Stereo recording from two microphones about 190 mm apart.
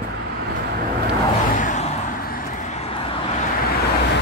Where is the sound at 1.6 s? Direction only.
40° left (ahead or behind).